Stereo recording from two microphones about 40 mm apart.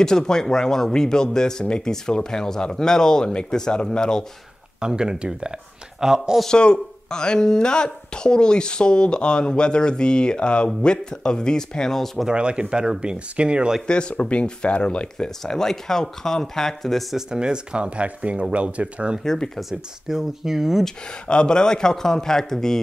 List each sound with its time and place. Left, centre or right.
0.0 s speech: centre
4.7 s speech: centre
6.4 s speech: left
12.3 s speech: right
13.8 s speech: left
15.2 s speech: centre
17.3 s speech: right
19.7 s speech: centre
21.1 s speech: left